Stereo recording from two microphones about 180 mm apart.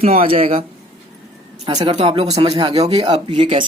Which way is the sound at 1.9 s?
30° right (ahead or behind).